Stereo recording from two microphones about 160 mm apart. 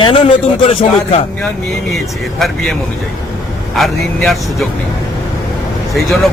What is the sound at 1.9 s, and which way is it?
Speech, centre (ahead or behind).